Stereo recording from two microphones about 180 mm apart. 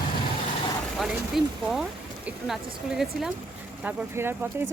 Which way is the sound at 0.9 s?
Centre (ahead or behind).